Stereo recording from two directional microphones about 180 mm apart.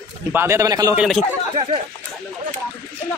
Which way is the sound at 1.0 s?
Centre (ahead or behind).